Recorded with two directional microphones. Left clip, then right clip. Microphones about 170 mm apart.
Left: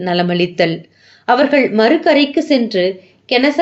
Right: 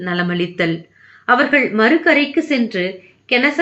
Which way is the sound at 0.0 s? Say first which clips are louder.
Left 5 dB; 30° left (ahead or behind).